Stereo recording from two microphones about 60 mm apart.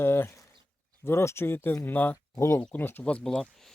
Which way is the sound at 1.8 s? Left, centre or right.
Left.